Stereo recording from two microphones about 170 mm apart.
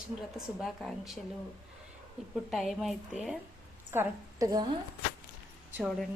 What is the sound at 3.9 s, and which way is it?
Speech, 15° right (ahead or behind).